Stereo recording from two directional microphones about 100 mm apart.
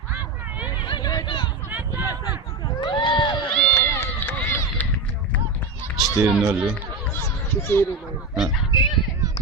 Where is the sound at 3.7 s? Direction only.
25° left (ahead or behind).